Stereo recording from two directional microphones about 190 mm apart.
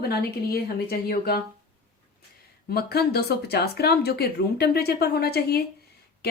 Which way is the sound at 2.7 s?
55° left (ahead or behind).